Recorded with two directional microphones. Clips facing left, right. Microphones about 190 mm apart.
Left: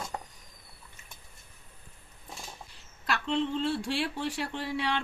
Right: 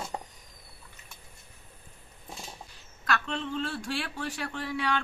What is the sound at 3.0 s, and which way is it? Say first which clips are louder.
Speech: left 2 dB; 30° left (ahead or behind).